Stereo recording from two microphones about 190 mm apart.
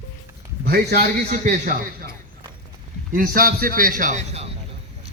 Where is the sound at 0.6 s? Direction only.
55° right (ahead or behind).